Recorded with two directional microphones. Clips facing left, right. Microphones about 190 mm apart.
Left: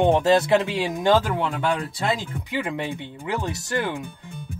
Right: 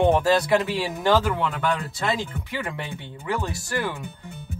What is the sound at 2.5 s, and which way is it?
Speech, 20° left (ahead or behind).